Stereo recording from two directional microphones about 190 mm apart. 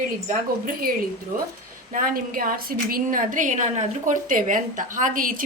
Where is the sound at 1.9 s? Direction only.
45° right (ahead or behind).